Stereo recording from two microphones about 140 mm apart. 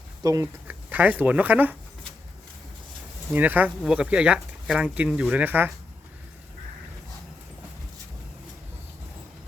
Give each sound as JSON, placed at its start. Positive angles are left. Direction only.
{"t": 0.2, "sound": "speech", "side_deg": -25}
{"t": 0.7, "sound": "speech", "side_deg": -10}
{"t": 3.3, "sound": "speech", "side_deg": -10}